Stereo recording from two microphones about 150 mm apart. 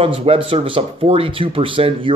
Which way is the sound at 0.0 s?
35° right (ahead or behind).